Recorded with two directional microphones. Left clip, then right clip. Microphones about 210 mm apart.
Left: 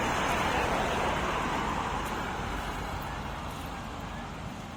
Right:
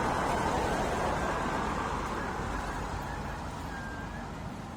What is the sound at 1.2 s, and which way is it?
Vehicle, 35° left (ahead or behind).